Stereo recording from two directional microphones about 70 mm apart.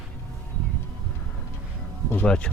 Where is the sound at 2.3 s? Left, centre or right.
Centre.